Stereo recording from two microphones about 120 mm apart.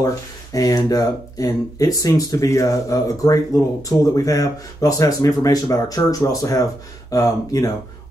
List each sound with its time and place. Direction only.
0.0 s speech: 30° left (ahead or behind)